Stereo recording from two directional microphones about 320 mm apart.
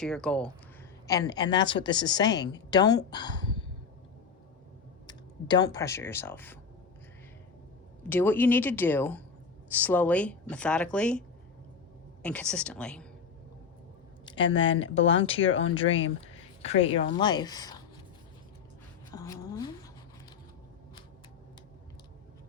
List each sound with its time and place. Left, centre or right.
0.0 s a woman's voice: centre
5.0 s speech: centre
8.1 s a woman's voice: centre
12.2 s speech: centre
14.6 s speech: left
16.2 s a woman's voice: centre
19.1 s a sound: centre